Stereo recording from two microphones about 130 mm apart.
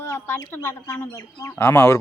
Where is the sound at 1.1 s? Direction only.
20° left (ahead or behind).